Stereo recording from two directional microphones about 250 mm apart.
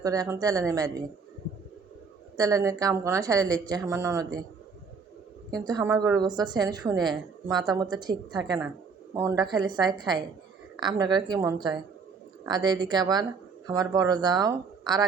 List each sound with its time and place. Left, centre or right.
0.0 s a woman's voice: centre
2.3 s a woman's voice: centre
5.5 s a woman's voice: centre